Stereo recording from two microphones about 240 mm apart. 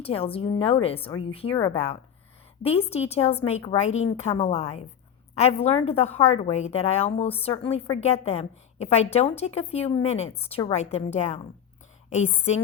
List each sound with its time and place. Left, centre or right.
0.0 s a woman's voice: left